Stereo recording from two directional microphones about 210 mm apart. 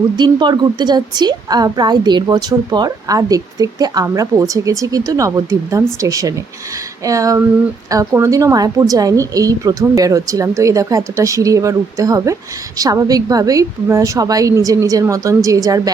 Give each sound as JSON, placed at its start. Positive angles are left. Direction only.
{"t": 0.2, "sound": "a woman's voice", "side_deg": -20}